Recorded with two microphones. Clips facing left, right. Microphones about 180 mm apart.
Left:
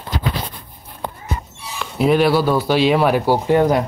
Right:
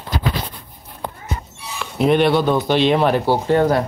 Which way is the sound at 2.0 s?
5° left (ahead or behind).